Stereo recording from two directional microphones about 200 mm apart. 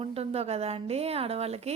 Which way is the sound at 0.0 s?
30° right (ahead or behind).